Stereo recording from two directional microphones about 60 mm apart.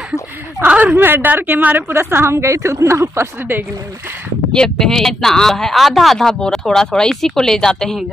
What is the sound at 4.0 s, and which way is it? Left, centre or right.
Speech, right.